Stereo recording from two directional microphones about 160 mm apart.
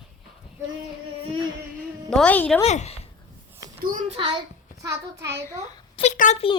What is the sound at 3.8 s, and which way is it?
Speech, 60° right (ahead or behind).